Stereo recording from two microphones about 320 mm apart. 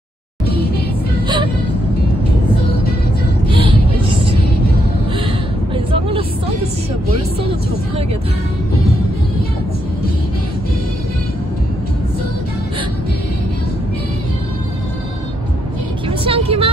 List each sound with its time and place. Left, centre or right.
3.4 s vehicle: centre
5.9 s vehicle: centre
16.1 s vehicle: centre